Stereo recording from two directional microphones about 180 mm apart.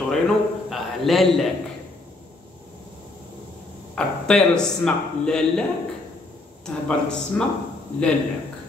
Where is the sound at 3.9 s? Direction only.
5° left (ahead or behind).